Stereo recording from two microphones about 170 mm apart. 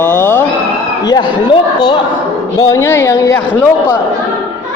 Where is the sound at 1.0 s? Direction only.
25° left (ahead or behind).